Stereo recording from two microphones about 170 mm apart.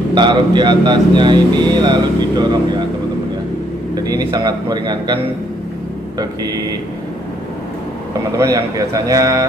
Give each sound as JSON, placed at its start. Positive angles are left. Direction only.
{"t": 0.1, "sound": "speech", "side_deg": -25}
{"t": 3.9, "sound": "speech", "side_deg": -20}
{"t": 8.4, "sound": "speech", "side_deg": -20}